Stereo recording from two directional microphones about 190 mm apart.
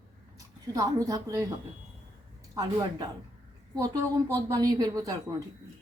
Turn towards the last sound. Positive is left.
turn(degrees=-20)  # may be behind; listen again after turning